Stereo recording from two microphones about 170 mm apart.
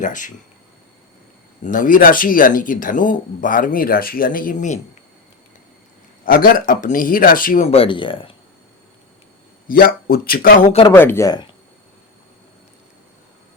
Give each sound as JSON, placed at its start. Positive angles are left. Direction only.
{"t": 0.0, "sound": "speech", "side_deg": 50}
{"t": 1.6, "sound": "speech", "side_deg": 50}
{"t": 6.2, "sound": "speech", "side_deg": 55}
{"t": 7.7, "sound": "speech", "side_deg": 30}
{"t": 9.6, "sound": "speech", "side_deg": 60}
{"t": 10.9, "sound": "speech", "side_deg": 10}